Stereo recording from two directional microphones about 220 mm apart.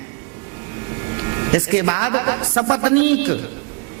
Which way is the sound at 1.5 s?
20° right (ahead or behind).